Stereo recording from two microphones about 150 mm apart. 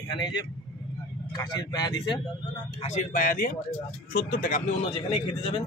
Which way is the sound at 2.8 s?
55° left (ahead or behind).